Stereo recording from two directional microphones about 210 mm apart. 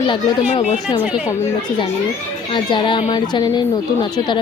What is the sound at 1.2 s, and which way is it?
A woman's voice, 15° left (ahead or behind).